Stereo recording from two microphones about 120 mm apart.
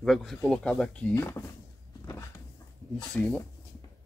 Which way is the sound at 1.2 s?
20° left (ahead or behind).